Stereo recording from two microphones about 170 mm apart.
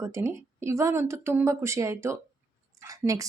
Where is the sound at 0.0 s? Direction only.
15° right (ahead or behind).